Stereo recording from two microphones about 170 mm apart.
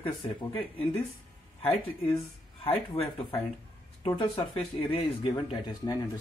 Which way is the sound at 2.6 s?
30° left (ahead or behind).